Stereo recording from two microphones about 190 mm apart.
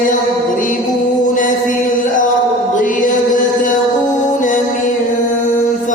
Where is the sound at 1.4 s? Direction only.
45° left (ahead or behind).